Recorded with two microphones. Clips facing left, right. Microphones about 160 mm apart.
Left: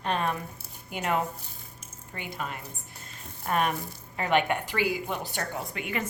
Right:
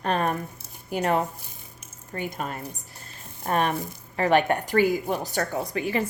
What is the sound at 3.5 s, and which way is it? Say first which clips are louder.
A woman's voice: right 3 dB; 35° right (ahead or behind).